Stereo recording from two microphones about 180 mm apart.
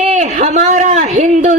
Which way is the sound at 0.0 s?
40° right (ahead or behind).